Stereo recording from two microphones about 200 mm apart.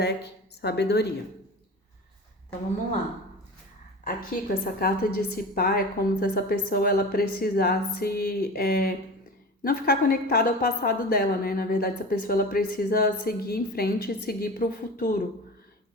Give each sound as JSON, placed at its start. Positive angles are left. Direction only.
{"t": 0.0, "sound": "a woman's voice", "side_deg": 55}
{"t": 4.0, "sound": "a woman's voice", "side_deg": 45}